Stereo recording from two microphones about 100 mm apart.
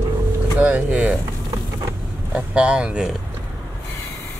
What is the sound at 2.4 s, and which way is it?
Speech, 10° right (ahead or behind).